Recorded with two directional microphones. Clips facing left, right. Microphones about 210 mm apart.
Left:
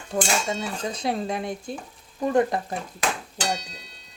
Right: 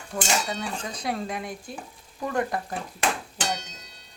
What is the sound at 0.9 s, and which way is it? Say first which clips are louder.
Speech: left 3 dB; 25° left (ahead or behind).